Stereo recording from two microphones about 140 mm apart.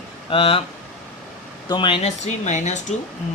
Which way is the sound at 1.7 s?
35° left (ahead or behind).